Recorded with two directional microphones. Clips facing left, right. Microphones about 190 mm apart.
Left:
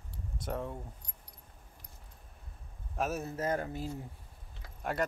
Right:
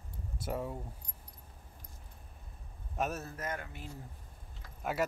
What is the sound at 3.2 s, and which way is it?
Speech, 30° left (ahead or behind).